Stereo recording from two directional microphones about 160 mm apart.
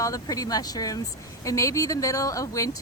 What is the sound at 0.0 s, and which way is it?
Speech, 20° left (ahead or behind).